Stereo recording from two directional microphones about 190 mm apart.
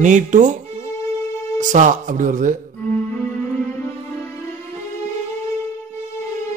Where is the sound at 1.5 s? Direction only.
40° right (ahead or behind).